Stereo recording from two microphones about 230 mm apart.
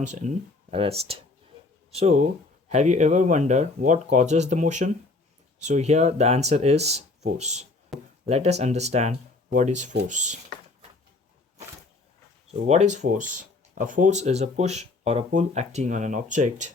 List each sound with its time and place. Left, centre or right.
0.0 s speech: right
7.9 s speech: centre
8.3 s speech: right
12.6 s speech: right